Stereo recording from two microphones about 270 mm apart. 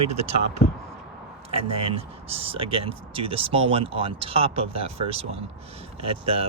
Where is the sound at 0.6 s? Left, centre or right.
Left.